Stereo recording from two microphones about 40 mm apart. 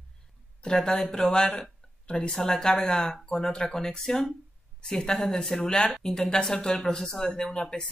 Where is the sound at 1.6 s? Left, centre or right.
Left.